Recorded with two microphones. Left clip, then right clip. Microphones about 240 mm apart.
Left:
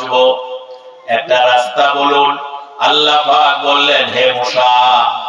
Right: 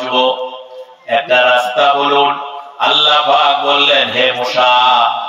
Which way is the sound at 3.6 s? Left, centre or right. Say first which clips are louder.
Even; left.